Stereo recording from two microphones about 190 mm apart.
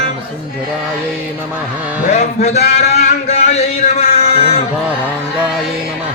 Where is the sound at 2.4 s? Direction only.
35° left (ahead or behind).